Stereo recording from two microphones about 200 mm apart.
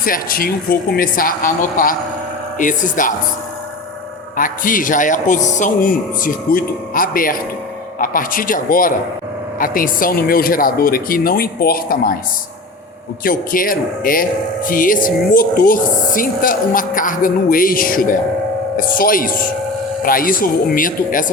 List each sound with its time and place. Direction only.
0.0 s a man's voice: 45° left (ahead or behind)
4.4 s a man's voice: 45° left (ahead or behind)
13.2 s speech: 45° left (ahead or behind)